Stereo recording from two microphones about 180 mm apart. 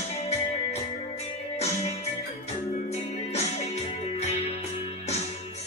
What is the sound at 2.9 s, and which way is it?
Music, 35° left (ahead or behind).